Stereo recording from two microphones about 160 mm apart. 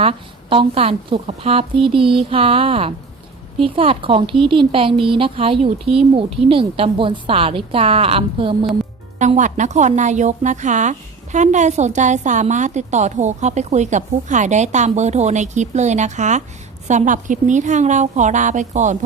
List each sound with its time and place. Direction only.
0.0 s a woman's voice: 35° right (ahead or behind)
9.1 s a woman's voice: 50° right (ahead or behind)